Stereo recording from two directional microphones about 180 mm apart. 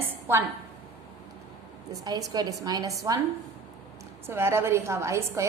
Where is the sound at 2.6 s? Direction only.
20° right (ahead or behind).